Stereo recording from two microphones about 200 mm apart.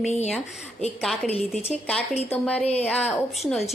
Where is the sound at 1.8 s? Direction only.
Centre (ahead or behind).